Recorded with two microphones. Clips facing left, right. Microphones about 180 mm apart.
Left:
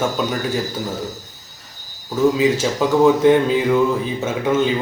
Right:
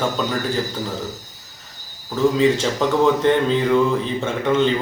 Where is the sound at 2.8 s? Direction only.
10° left (ahead or behind).